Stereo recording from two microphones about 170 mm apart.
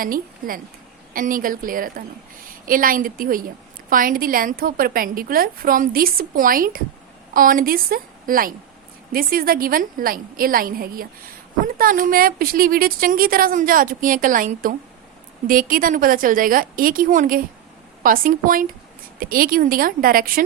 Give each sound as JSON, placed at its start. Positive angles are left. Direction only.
{"t": 0.0, "sound": "a woman's voice", "side_deg": -55}